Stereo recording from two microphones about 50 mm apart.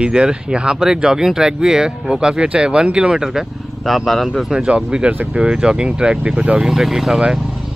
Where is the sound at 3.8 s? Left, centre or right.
Centre.